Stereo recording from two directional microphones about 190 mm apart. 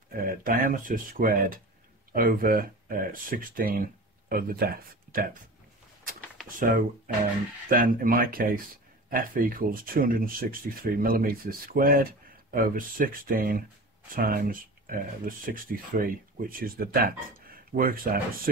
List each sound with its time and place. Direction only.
0.1 s speech: 45° right (ahead or behind)
6.5 s speech: 45° right (ahead or behind)